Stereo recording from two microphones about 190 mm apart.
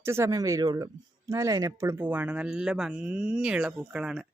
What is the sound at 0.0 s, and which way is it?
Speech, 15° right (ahead or behind).